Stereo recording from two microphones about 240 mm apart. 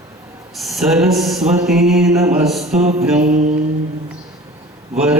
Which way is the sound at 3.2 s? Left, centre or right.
Right.